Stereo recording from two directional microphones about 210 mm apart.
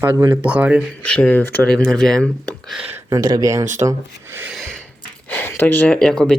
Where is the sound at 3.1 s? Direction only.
15° right (ahead or behind); by 4.8 s centre (ahead or behind).